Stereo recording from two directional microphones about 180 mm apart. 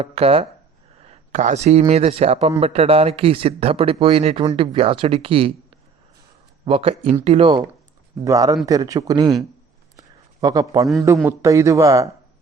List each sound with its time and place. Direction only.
0.0 s speech: 35° right (ahead or behind)
1.0 s a sound: 40° right (ahead or behind)
1.9 s speech: 35° right (ahead or behind)
6.7 s speech: 30° right (ahead or behind)
8.2 s speech: 20° right (ahead or behind)
10.4 s speech: 20° right (ahead or behind)